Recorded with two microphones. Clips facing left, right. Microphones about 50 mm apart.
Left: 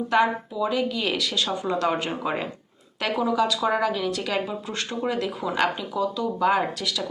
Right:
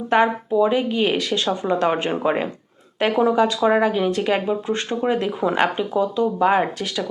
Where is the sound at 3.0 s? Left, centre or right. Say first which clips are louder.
Right 6 dB; right.